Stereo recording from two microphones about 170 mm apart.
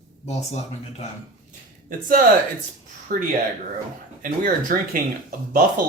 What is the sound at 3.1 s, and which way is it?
Speech, 60° right (ahead or behind).